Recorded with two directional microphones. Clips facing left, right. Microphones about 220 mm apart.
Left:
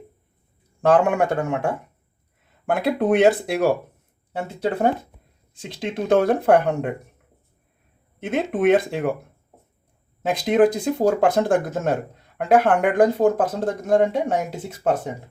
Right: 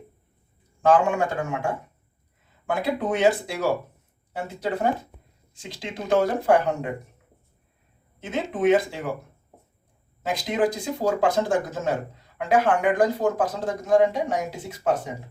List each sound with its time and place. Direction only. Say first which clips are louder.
0.8 s speech: left 3 dB; 65° left (ahead or behind)
5.6 s speech: left 6 dB; 55° left (ahead or behind)
8.2 s speech: left 3 dB; 60° left (ahead or behind)
10.2 s speech: left 7 dB; 55° left (ahead or behind)